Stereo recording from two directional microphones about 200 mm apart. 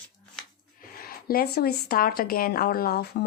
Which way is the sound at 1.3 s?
50° left (ahead or behind).